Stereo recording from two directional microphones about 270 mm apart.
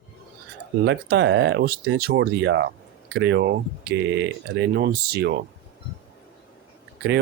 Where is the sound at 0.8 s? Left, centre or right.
Right.